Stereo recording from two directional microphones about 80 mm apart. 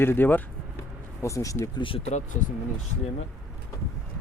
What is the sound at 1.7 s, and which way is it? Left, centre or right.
Speech, left.